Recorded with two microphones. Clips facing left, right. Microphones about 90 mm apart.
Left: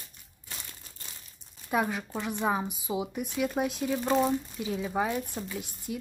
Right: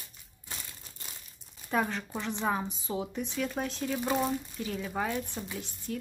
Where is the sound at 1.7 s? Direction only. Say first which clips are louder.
Left 2 dB; 10° left (ahead or behind).